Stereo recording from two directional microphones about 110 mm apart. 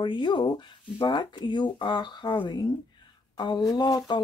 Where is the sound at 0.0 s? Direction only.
45° left (ahead or behind).